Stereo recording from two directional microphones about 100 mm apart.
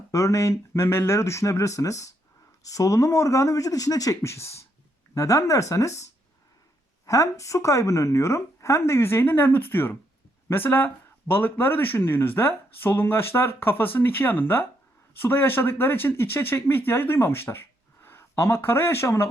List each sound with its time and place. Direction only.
0.1 s speech: 30° left (ahead or behind)